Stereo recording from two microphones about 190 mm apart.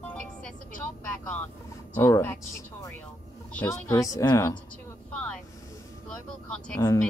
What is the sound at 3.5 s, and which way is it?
A woman's voice, 10° left (ahead or behind).